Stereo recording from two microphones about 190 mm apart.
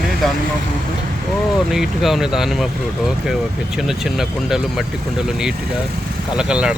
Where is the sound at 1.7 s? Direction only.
Centre (ahead or behind).